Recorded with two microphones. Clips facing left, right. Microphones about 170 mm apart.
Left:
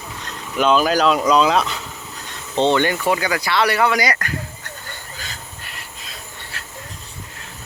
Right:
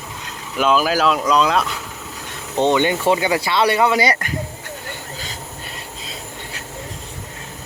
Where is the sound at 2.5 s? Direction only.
15° right (ahead or behind).